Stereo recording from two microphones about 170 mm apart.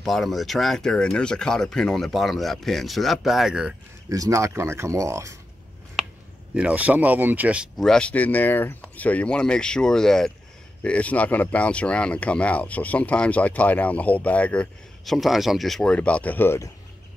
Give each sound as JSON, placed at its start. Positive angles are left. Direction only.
{"t": 0.0, "sound": "speech", "side_deg": 0}
{"t": 4.1, "sound": "speech", "side_deg": -20}
{"t": 6.5, "sound": "speech", "side_deg": -5}